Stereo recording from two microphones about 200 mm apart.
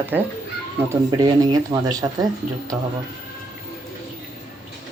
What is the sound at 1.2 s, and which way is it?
Speech, 20° right (ahead or behind).